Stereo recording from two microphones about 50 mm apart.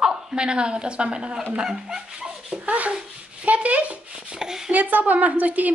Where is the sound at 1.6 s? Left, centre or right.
Centre.